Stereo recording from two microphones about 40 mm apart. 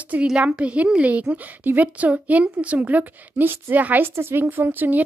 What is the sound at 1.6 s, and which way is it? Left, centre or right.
A woman's voice, right.